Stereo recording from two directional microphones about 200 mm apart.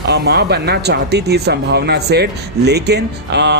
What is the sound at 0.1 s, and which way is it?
Speech, 55° right (ahead or behind).